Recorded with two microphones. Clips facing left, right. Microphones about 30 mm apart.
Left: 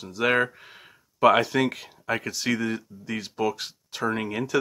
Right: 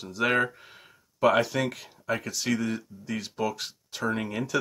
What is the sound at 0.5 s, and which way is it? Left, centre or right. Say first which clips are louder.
Speech: left 3 dB; centre.